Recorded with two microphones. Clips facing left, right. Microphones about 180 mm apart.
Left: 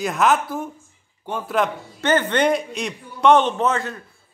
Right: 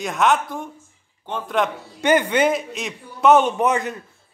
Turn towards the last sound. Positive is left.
turn(degrees=-15)  # may be behind; listen again after turning